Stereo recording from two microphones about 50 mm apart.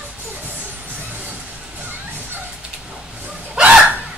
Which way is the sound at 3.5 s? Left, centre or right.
Right.